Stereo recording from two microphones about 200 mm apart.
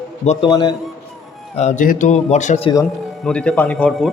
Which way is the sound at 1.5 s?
35° left (ahead or behind).